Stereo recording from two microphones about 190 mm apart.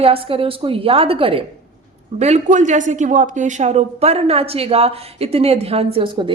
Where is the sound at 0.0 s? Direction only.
30° right (ahead or behind).